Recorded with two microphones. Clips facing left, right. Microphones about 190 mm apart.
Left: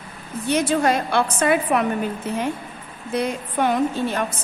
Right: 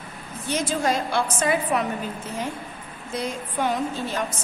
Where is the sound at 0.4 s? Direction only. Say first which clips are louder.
Left 5 dB; 60° left (ahead or behind).